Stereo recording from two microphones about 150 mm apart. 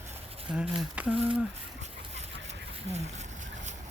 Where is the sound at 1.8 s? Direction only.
50° right (ahead or behind).